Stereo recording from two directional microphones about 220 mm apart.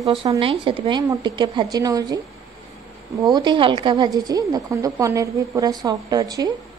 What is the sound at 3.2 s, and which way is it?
A woman's voice, 20° right (ahead or behind).